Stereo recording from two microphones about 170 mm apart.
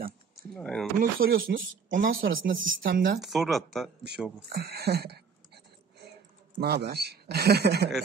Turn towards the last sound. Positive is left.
turn(degrees=-75)  # may be behind; listen again after turning